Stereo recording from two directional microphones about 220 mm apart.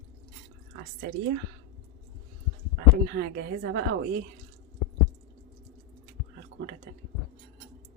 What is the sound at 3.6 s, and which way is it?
Speech, 55° right (ahead or behind).